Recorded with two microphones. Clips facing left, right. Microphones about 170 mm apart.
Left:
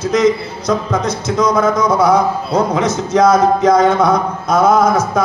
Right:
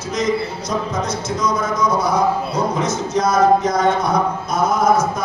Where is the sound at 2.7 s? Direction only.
85° left.